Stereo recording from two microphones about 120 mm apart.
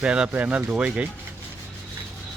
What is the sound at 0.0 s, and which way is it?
Speech, 10° right (ahead or behind).